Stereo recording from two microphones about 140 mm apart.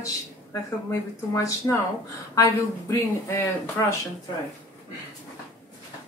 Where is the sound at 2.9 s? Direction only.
20° left (ahead or behind).